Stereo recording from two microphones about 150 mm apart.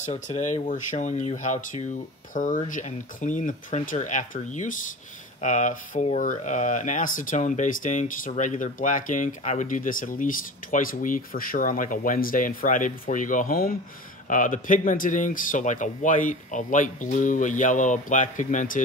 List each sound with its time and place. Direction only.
0.0 s speech: 50° left (ahead or behind); by 13.7 s 75° left (ahead or behind)
14.2 s speech: 60° left (ahead or behind)